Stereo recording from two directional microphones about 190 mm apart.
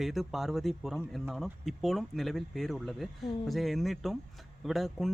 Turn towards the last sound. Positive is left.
turn(degrees=0)  # may be behind; listen again after turning